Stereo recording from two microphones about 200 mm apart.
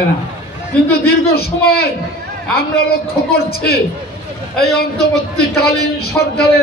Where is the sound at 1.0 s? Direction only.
50° left (ahead or behind).